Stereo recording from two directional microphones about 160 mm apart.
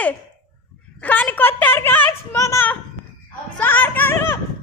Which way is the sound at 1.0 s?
10° left (ahead or behind).